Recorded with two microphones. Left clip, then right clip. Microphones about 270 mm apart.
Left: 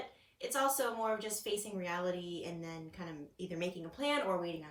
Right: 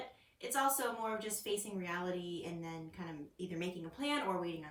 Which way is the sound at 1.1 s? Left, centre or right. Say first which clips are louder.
Left 2 dB; centre.